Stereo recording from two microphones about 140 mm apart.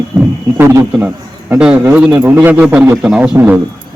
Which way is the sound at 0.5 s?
20° right (ahead or behind).